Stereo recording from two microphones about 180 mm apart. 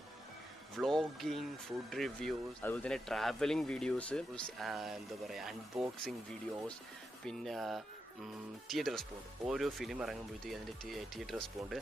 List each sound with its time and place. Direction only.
0.7 s speech: centre (ahead or behind)
7.2 s speech: centre (ahead or behind)